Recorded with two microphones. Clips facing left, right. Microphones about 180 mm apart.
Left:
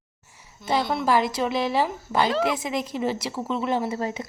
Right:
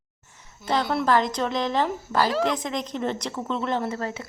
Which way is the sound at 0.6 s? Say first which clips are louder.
Even; 10° left (ahead or behind).